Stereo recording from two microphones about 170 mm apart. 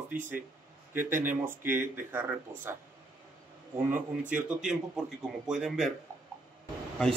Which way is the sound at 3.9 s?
10° right (ahead or behind).